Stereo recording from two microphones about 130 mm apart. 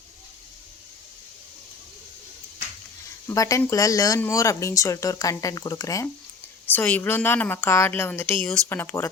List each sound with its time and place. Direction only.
3.2 s speech: 25° left (ahead or behind)
6.7 s a woman's voice: 15° left (ahead or behind)